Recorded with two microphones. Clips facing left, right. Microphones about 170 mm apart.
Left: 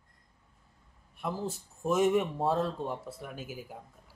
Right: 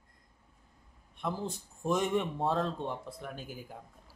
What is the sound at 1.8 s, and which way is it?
Speech, 5° left (ahead or behind).